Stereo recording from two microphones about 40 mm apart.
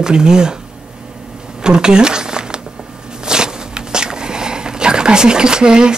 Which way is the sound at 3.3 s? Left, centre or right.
Centre.